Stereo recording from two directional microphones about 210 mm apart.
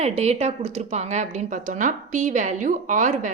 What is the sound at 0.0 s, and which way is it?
A woman's voice, 30° right (ahead or behind).